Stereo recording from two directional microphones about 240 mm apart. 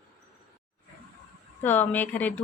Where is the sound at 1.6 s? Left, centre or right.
Centre.